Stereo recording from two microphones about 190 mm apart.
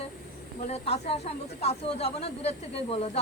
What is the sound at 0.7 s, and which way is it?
Speech, 35° left (ahead or behind).